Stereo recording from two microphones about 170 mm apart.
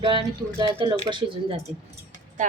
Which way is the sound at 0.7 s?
25° right (ahead or behind).